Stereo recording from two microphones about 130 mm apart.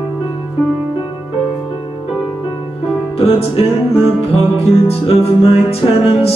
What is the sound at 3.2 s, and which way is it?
Music, 50° left (ahead or behind).